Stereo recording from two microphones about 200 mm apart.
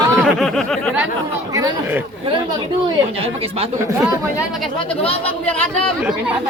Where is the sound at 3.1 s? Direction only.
30° right (ahead or behind).